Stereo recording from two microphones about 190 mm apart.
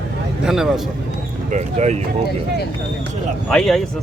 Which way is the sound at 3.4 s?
Centre (ahead or behind).